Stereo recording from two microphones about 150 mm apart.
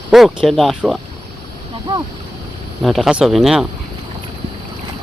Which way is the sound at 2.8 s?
Centre (ahead or behind).